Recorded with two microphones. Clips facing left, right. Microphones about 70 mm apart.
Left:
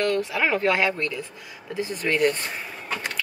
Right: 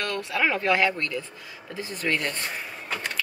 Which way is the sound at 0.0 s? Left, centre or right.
Centre.